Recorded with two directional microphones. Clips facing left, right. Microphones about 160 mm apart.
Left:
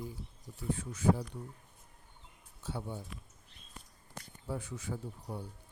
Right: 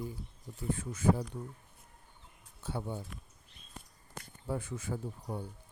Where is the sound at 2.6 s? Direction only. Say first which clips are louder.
Right 2 dB; 55° right (ahead or behind).